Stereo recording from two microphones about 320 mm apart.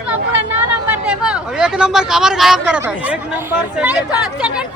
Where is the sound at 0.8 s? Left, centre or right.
Centre.